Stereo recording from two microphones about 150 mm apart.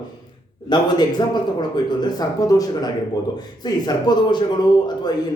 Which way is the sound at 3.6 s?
25° left (ahead or behind).